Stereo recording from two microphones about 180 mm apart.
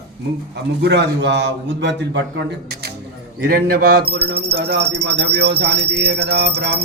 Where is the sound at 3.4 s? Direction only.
55° right (ahead or behind).